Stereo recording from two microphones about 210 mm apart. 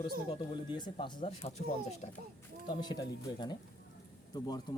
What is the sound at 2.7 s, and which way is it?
Speech, 20° left (ahead or behind).